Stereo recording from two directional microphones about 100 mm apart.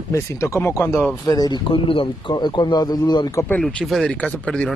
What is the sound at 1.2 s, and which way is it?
Speech, 40° left (ahead or behind).